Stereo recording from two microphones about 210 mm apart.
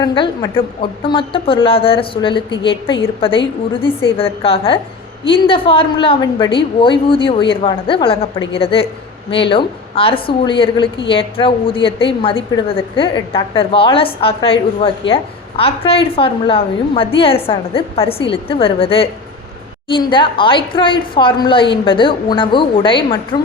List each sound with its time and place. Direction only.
0.0 s a woman's voice: 20° left (ahead or behind)